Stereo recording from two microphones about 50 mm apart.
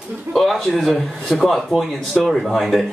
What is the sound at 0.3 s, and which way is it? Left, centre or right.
Speech, centre.